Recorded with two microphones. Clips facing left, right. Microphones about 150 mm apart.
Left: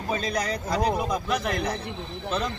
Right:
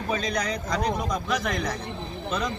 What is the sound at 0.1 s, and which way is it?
Speech, 35° left (ahead or behind).